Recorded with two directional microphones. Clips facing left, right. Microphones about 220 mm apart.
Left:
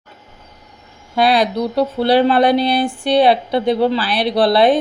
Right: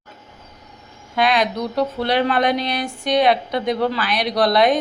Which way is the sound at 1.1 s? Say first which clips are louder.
Left 4 dB; 35° left (ahead or behind).